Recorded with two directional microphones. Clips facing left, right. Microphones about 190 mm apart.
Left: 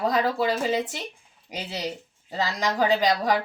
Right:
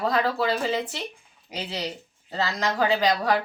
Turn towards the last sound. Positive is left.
turn(degrees=15)  # may be behind; listen again after turning